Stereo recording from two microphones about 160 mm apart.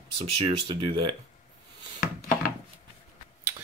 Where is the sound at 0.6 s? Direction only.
30° right (ahead or behind).